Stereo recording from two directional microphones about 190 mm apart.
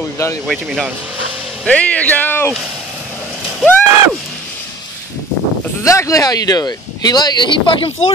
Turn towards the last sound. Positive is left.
turn(degrees=25)  # may be behind; listen again after turning